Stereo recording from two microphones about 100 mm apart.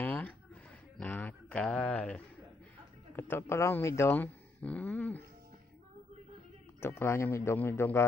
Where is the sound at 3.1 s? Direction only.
25° left (ahead or behind).